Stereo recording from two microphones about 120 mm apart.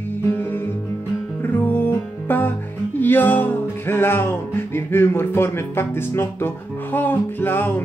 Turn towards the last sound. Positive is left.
turn(degrees=15)  # may be behind; listen again after turning